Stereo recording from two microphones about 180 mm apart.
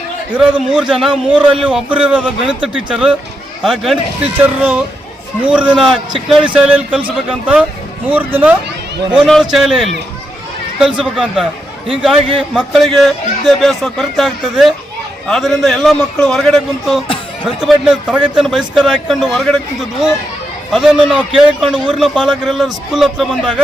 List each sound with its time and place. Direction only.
0.3 s a man's voice: 5° right (ahead or behind)